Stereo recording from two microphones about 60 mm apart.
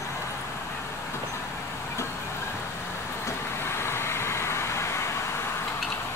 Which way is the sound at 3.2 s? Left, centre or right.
Left.